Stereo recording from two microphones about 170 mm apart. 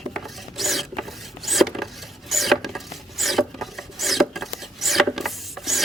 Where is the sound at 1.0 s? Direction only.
Centre (ahead or behind).